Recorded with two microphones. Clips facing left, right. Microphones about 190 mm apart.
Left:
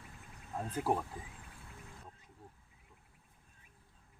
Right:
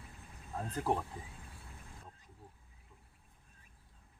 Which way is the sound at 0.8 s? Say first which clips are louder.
Left 1 dB; 5° left (ahead or behind).